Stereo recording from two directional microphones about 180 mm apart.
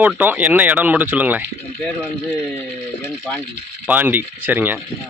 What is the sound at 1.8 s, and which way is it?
Speech, 10° left (ahead or behind).